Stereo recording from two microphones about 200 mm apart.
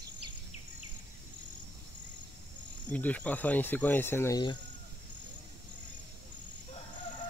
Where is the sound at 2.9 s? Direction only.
10° left (ahead or behind).